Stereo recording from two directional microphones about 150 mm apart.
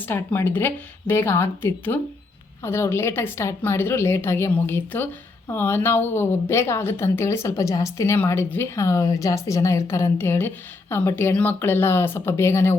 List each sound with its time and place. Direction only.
0.0 s a woman's voice: 15° left (ahead or behind)